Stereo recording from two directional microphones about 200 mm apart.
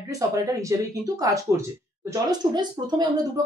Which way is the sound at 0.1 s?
15° right (ahead or behind).